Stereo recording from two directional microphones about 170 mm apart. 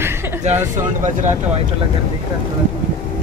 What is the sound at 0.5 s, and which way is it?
Speech, 40° right (ahead or behind).